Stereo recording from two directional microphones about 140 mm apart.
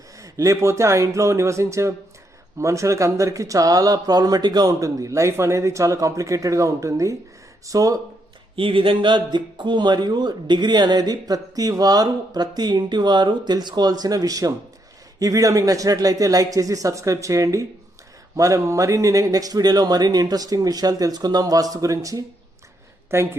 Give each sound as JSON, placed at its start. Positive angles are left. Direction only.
{"t": 0.2, "sound": "speech", "side_deg": -25}
{"t": 8.5, "sound": "a woman's voice", "side_deg": -40}